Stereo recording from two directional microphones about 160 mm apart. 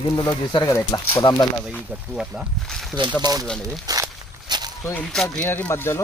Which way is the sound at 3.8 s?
25° right (ahead or behind).